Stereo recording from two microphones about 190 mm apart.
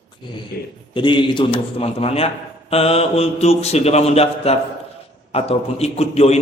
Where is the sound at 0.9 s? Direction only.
25° left (ahead or behind).